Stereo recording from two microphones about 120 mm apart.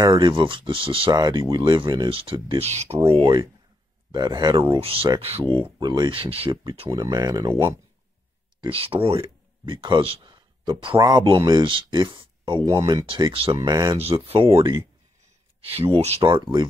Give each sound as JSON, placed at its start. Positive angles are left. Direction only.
{"t": 0.0, "sound": "speech", "side_deg": -40}
{"t": 1.1, "sound": "speech", "side_deg": -35}
{"t": 2.0, "sound": "speech", "side_deg": -50}
{"t": 2.6, "sound": "speech", "side_deg": -65}
{"t": 4.1, "sound": "speech", "side_deg": -35}
{"t": 4.6, "sound": "speech", "side_deg": -50}
{"t": 5.4, "sound": "speech", "side_deg": -40}
{"t": 6.5, "sound": "speech", "side_deg": -35}
{"t": 8.5, "sound": "speech", "side_deg": -50}
{"t": 13.0, "sound": "speech", "side_deg": -45}
{"t": 13.6, "sound": "speech", "side_deg": -35}
{"t": 13.9, "sound": "speech", "side_deg": -55}
{"t": 15.6, "sound": "speech", "side_deg": -55}
{"t": 16.2, "sound": "speech", "side_deg": -40}